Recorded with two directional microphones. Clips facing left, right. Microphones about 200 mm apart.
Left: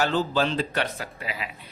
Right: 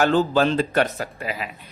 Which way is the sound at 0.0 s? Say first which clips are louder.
Right 5 dB; 50° right (ahead or behind).